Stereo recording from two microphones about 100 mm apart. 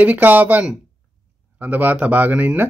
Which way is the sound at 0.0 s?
15° right (ahead or behind).